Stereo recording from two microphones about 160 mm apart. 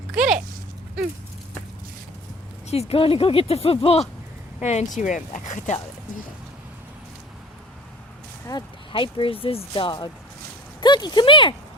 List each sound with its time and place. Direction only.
0.1 s a sound: 5° right (ahead or behind)
2.6 s speech: 40° left (ahead or behind)
8.4 s speech: 30° left (ahead or behind)